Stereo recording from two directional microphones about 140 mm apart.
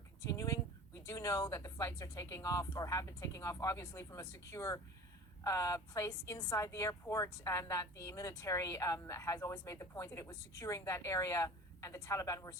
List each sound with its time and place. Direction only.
0.3 s a woman's voice: 25° left (ahead or behind)